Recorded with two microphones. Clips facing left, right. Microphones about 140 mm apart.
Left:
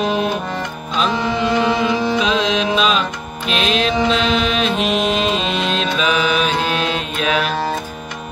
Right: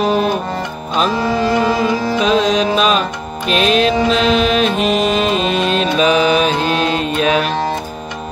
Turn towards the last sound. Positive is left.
turn(degrees=-40)  # may be behind; listen again after turning